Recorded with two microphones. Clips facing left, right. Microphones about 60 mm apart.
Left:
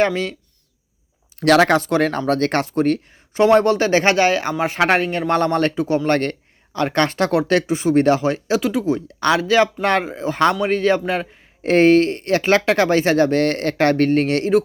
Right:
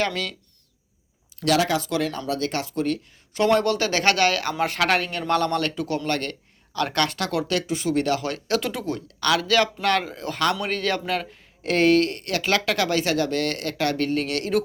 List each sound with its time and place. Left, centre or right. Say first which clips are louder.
0.0 s speech: left 7 dB; left
1.4 s speech: left 8 dB; left
3.3 s speech: left 6 dB; left
6.1 s speech: left 8 dB; left; by 9.0 s centre
9.0 s speech: left 5 dB; left